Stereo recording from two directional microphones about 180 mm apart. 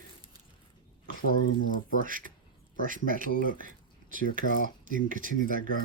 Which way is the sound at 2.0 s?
50° right (ahead or behind).